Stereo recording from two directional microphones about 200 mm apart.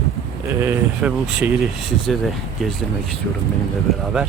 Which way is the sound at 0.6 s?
10° right (ahead or behind).